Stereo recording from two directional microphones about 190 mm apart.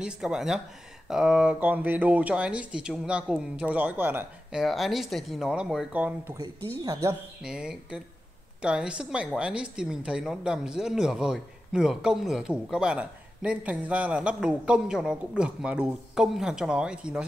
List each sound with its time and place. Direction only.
0.0 s a woman's voice: 5° right (ahead or behind)
7.4 s a woman's voice: 5° right (ahead or behind)